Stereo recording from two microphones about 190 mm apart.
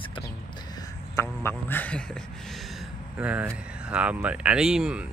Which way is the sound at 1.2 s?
10° left (ahead or behind).